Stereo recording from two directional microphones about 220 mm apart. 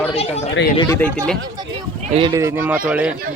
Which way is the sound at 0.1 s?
25° left (ahead or behind).